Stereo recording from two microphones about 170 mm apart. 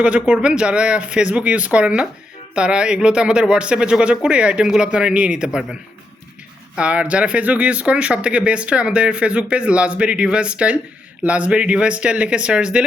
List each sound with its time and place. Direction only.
0.0 s speech: 5° right (ahead or behind)
6.7 s speech: 5° right (ahead or behind)